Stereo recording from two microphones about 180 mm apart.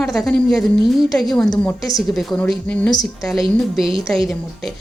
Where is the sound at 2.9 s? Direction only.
20° left (ahead or behind).